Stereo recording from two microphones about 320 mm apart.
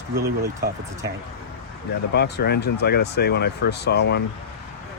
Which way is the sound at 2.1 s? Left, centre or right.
Left.